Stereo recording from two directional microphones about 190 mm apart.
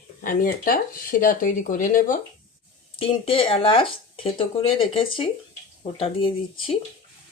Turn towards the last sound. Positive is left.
turn(degrees=30)  # may be behind; listen again after turning